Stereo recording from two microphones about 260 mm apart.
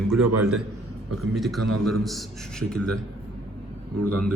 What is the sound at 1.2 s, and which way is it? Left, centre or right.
A man's voice, centre.